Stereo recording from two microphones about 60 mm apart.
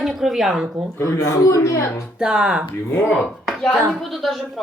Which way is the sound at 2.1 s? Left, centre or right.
Centre.